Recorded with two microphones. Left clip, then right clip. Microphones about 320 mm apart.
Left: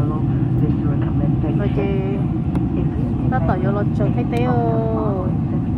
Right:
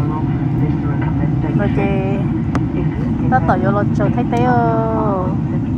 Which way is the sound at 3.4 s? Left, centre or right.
Right.